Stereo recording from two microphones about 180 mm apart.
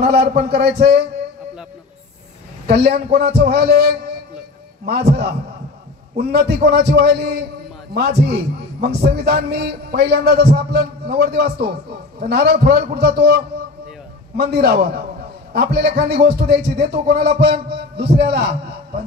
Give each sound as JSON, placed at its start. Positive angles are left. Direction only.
{"t": 0.0, "sound": "a man's voice", "side_deg": -60}
{"t": 2.6, "sound": "a man's voice", "side_deg": -60}